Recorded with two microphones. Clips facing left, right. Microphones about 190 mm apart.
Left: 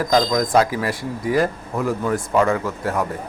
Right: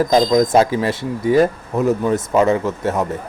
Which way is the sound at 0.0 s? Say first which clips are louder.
Right 5 dB; 25° right (ahead or behind).